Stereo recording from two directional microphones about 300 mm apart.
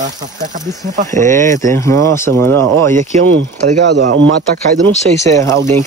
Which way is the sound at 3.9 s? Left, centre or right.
Right.